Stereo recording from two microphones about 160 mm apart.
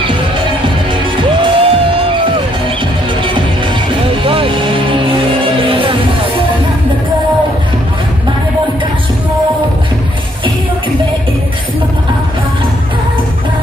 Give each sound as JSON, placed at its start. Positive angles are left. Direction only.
{"t": 1.1, "sound": "music", "side_deg": -30}
{"t": 4.2, "sound": "music", "side_deg": -35}